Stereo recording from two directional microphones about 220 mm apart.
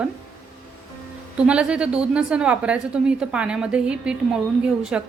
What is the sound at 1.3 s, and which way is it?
A woman's voice, 5° right (ahead or behind).